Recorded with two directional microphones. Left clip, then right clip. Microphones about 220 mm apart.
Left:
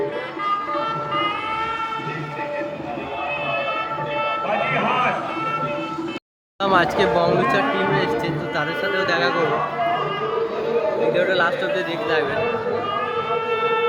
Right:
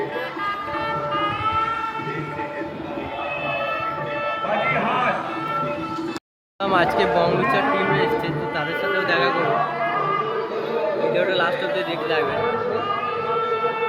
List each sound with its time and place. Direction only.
4.4 s a sound: 40° left (ahead or behind)
6.6 s a man's voice: 10° left (ahead or behind)
11.1 s a man's voice: 10° left (ahead or behind)